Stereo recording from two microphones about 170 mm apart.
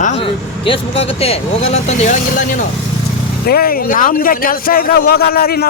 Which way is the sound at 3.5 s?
60° left (ahead or behind).